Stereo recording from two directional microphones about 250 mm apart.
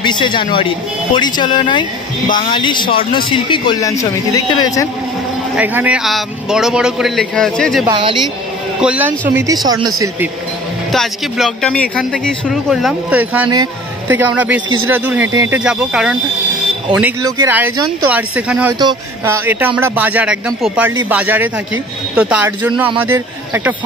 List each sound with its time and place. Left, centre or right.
0.0 s speech: centre
5.6 s speech: centre
7.8 s a woman's voice: centre
8.8 s speech: centre
10.9 s speech: centre
19.8 s speech: centre